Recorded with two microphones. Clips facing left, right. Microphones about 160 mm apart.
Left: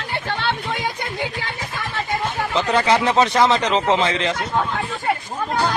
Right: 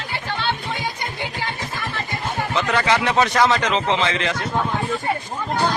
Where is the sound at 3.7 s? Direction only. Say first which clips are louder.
Left 2 dB; 40° left (ahead or behind).